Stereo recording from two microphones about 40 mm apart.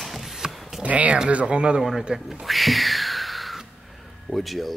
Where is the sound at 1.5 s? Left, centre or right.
Right.